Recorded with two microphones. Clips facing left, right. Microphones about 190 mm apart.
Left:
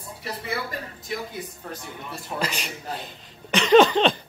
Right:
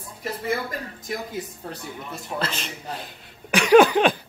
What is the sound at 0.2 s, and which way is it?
Speech, 45° right (ahead or behind).